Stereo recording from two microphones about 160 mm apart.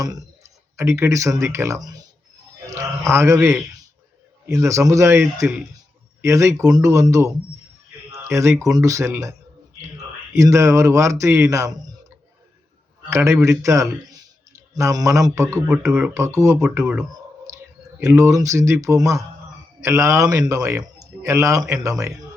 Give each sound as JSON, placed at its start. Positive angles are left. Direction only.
{"t": 0.0, "sound": "a man's voice", "side_deg": -20}
{"t": 6.2, "sound": "speech", "side_deg": -20}
{"t": 8.1, "sound": "a sound", "side_deg": -20}
{"t": 8.7, "sound": "speech", "side_deg": -20}
{"t": 10.3, "sound": "speech", "side_deg": -20}
{"t": 13.1, "sound": "a man's voice", "side_deg": -20}
{"t": 18.0, "sound": "speech", "side_deg": -15}